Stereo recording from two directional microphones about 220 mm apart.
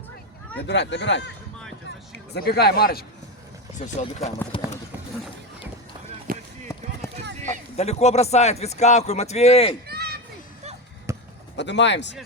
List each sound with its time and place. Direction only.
0.7 s speech: 50° left (ahead or behind)
2.3 s speech: 45° left (ahead or behind)
3.8 s speech: 30° left (ahead or behind)
6.3 s a sound: 40° right (ahead or behind)
7.8 s speech: 30° left (ahead or behind)
9.8 s a sound: 45° right (ahead or behind)
11.1 s basketball bounce: 15° right (ahead or behind)
11.5 s speech: 55° left (ahead or behind)